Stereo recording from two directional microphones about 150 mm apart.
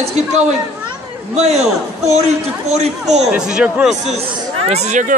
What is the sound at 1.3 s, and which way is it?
Speech, 45° right (ahead or behind).